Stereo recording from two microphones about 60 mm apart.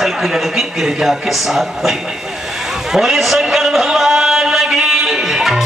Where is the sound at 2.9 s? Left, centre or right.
Centre.